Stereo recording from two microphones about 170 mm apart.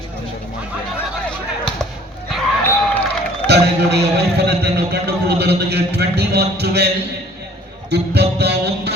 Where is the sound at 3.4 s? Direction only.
80° right.